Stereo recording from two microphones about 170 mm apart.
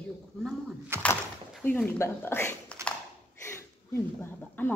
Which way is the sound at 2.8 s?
15° right (ahead or behind).